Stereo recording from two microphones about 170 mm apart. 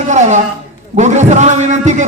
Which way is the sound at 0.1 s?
45° right (ahead or behind).